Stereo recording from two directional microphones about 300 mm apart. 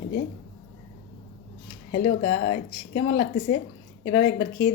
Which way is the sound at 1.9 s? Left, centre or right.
Left.